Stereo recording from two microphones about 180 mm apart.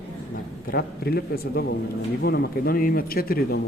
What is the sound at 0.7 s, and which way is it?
Speech, 60° left (ahead or behind).